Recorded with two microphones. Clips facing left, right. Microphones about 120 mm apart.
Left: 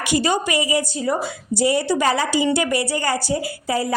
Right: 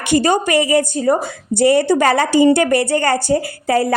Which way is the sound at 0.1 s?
50° right (ahead or behind).